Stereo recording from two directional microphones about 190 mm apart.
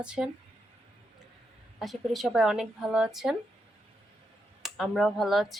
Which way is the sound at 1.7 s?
Centre (ahead or behind).